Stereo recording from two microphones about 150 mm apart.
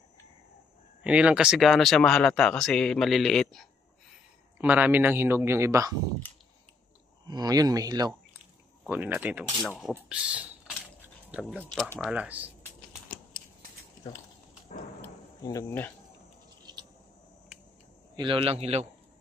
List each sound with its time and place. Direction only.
1.0 s speech: 10° right (ahead or behind)
4.6 s a man's voice: 10° right (ahead or behind)
7.2 s speech: 25° right (ahead or behind)
8.8 s a man's voice: 10° right (ahead or behind)
12.0 s a man's voice: 10° right (ahead or behind)
15.4 s speech: 20° left (ahead or behind)
18.1 s a man's voice: 35° right (ahead or behind)